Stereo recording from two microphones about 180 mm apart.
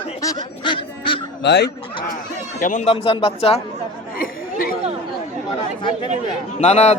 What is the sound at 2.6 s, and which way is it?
A man's voice, 40° left (ahead or behind).